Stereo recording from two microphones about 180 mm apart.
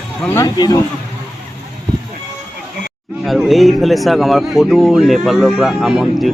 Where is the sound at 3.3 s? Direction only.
Centre (ahead or behind).